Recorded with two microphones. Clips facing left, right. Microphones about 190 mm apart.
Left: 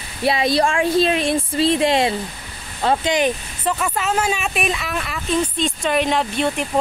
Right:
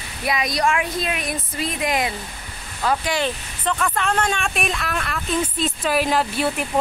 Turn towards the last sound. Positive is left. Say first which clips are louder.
# left 1 dB
turn(degrees=-5)  # may be behind; listen again after turning